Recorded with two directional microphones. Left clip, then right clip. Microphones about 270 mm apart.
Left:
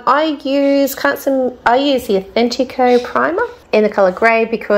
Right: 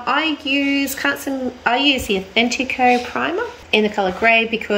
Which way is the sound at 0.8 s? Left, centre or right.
Centre.